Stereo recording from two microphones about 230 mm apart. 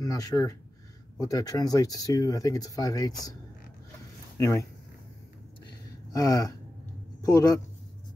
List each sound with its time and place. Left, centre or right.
0.0 s speech: centre
4.4 s speech: centre
5.7 s a sound: centre
7.2 s speech: centre